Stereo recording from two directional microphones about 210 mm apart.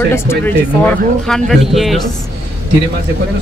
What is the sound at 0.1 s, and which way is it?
Speech, 10° left (ahead or behind).